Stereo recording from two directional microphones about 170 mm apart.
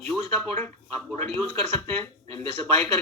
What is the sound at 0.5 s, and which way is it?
A man's voice, 10° left (ahead or behind).